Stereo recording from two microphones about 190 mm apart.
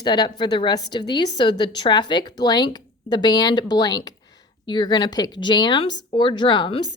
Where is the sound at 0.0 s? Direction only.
25° left (ahead or behind).